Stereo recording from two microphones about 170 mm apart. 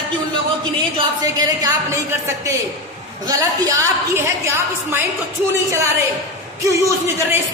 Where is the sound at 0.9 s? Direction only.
20° right (ahead or behind).